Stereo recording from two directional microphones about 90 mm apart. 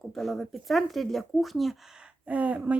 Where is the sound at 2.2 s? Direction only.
15° right (ahead or behind).